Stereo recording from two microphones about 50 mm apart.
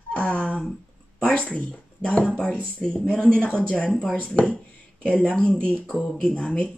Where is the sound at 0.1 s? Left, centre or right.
Left.